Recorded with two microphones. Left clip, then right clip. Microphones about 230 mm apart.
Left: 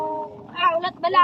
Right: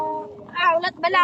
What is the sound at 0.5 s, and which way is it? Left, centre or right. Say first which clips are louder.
Speech: right 1 dB; right.